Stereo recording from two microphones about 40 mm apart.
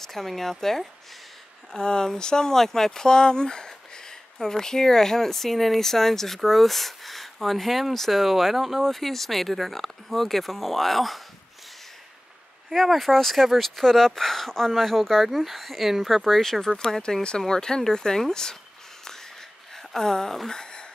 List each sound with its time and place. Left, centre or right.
0.0 s speech: centre
1.8 s speech: left; by 11.1 s centre
12.8 s speech: centre
17.0 s speech: left
19.9 s speech: centre
20.4 s a sound: centre